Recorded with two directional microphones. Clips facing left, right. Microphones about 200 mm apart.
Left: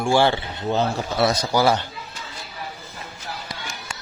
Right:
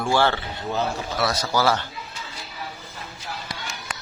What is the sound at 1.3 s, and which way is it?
Speech, 15° left (ahead or behind).